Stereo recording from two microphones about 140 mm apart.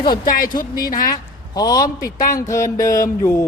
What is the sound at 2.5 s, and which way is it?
Speech, 20° left (ahead or behind).